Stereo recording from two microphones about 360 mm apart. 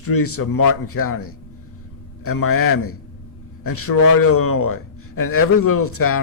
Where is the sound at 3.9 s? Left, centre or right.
Left.